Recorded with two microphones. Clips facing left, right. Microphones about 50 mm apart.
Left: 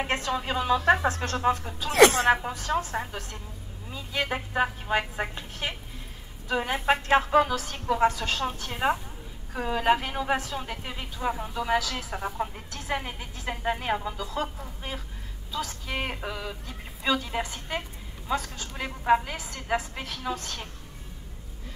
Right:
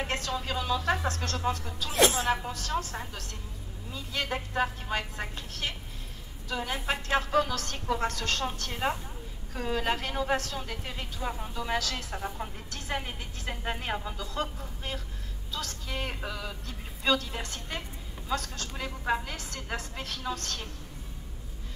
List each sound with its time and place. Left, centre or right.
0.0 s speech: left
1.9 s a woman's voice: left
2.3 s a woman's voice: left
7.2 s a woman's voice: centre
12.2 s a woman's voice: centre
15.9 s a woman's voice: centre
18.9 s speech: left
19.2 s a woman's voice: centre